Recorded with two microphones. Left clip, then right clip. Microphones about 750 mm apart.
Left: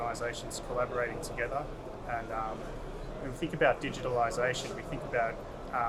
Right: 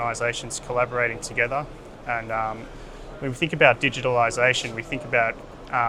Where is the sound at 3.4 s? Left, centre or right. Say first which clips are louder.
Right 10 dB; right.